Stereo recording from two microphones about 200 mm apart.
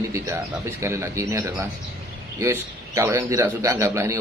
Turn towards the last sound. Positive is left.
turn(degrees=-15)  # may be behind; listen again after turning